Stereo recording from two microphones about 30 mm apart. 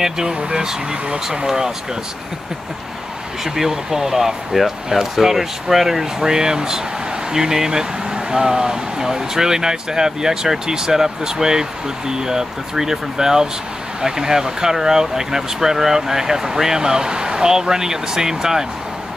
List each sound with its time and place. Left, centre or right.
0.3 s speech: right
3.4 s speech: centre